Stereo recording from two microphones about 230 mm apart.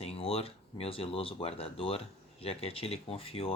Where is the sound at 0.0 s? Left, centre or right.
Left.